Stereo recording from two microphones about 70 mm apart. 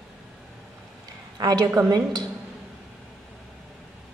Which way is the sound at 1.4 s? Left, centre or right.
Right.